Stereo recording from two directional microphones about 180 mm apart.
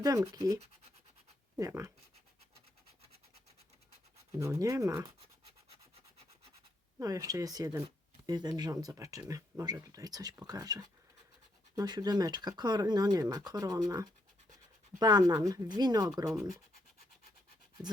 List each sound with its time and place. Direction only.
0.0 s speech: 20° right (ahead or behind)
4.3 s speech: 15° right (ahead or behind)
7.0 s speech: 20° right (ahead or behind)